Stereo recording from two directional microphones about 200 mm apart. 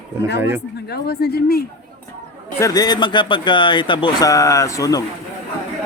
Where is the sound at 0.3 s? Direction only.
10° right (ahead or behind).